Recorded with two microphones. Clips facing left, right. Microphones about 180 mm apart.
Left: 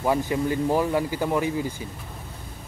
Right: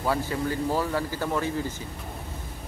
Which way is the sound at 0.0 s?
15° left (ahead or behind).